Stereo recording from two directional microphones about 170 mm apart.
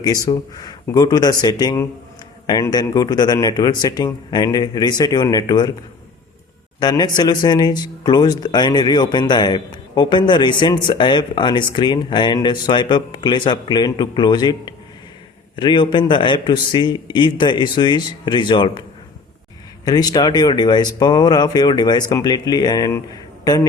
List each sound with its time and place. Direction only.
0.0 s speech: 20° left (ahead or behind)
6.7 s speech: 25° left (ahead or behind)
19.8 s speech: 20° left (ahead or behind)